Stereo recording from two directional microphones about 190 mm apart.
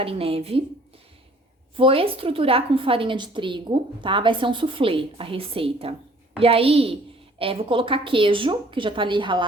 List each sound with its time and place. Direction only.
0.0 s a woman's voice: 30° right (ahead or behind)
1.7 s a woman's voice: 30° right (ahead or behind)